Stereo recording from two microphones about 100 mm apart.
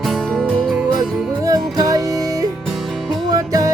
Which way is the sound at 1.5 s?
40° right (ahead or behind).